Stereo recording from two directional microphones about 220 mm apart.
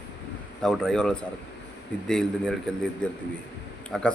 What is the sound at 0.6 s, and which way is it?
Speech, centre (ahead or behind).